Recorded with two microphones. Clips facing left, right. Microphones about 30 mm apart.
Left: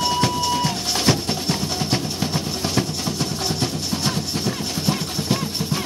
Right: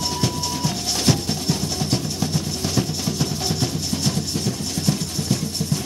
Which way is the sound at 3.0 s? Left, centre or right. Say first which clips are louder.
Even; centre.